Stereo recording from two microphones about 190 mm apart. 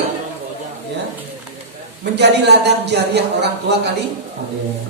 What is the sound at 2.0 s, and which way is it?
Speech, 60° right (ahead or behind).